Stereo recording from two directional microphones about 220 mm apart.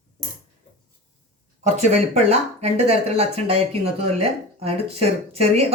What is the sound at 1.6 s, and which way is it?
Speech, 30° right (ahead or behind).